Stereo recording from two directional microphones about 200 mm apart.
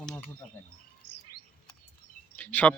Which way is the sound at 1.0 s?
90° left.